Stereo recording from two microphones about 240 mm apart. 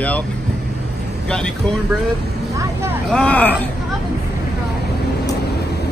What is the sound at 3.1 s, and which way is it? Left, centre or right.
Speech, centre.